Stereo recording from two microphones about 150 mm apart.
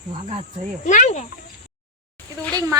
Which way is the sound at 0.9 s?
50° left (ahead or behind).